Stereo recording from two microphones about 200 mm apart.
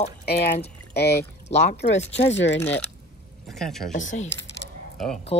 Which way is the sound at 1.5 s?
35° left (ahead or behind).